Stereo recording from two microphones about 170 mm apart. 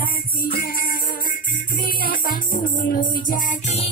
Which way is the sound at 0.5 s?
60° left (ahead or behind).